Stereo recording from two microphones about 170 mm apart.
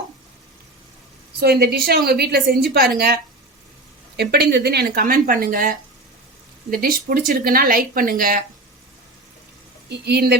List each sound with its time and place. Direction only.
1.4 s a woman's voice: 70° right (ahead or behind)
4.2 s speech: 70° right (ahead or behind); by 8.4 s 55° right (ahead or behind)
9.9 s a woman's voice: 70° right (ahead or behind)